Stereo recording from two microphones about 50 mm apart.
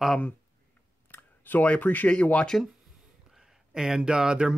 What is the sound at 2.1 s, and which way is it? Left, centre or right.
Speech, left.